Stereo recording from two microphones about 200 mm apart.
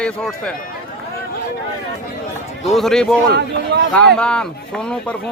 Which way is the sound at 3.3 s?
55° right (ahead or behind).